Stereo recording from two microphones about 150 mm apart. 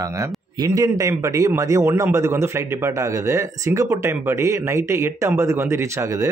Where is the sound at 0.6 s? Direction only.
25° right (ahead or behind).